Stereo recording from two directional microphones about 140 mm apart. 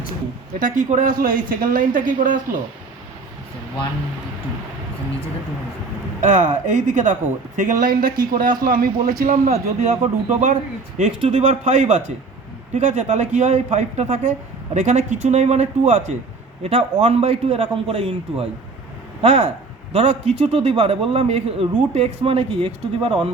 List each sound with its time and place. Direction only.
0.6 s speech: 65° right (ahead or behind)
6.2 s a man's voice: 60° right (ahead or behind); by 8.9 s 90° right
9.2 s speech: 70° right (ahead or behind)
16.6 s a man's voice: 40° right (ahead or behind)